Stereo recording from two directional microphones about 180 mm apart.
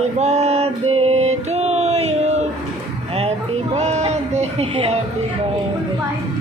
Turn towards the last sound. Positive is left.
turn(degrees=-30)  # may be behind; listen again after turning